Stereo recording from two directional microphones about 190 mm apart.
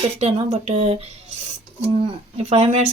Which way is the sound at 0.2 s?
35° right (ahead or behind).